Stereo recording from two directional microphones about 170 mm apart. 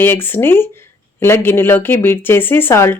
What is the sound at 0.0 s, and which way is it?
Speech, 15° left (ahead or behind).